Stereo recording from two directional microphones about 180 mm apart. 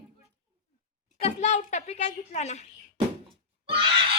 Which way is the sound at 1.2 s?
40° left (ahead or behind).